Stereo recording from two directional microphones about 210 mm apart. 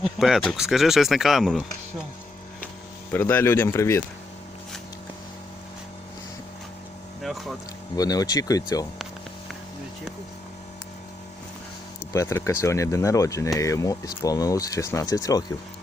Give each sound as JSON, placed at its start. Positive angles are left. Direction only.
{"t": 0.0, "sound": "speech", "side_deg": 0}
{"t": 3.1, "sound": "speech", "side_deg": 10}
{"t": 7.2, "sound": "vehicle", "side_deg": 0}
{"t": 7.9, "sound": "speech", "side_deg": 15}
{"t": 12.1, "sound": "speech", "side_deg": 15}